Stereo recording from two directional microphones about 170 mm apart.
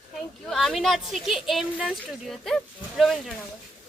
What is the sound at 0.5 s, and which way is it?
A woman's voice, centre (ahead or behind).